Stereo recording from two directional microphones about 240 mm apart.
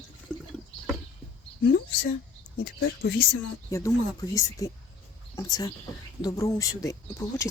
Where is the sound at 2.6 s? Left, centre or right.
Left.